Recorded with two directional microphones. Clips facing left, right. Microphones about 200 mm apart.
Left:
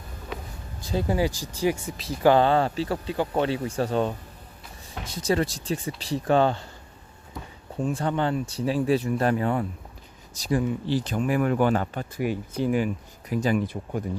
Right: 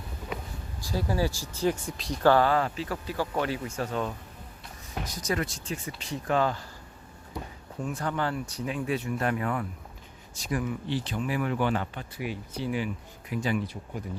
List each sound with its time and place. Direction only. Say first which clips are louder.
0.8 s speech: left 4 dB; 20° left (ahead or behind); by 2.2 s 5° left (ahead or behind)
2.2 s speech: left 3 dB; 20° left (ahead or behind)
7.8 s speech: left 5 dB; 30° left (ahead or behind)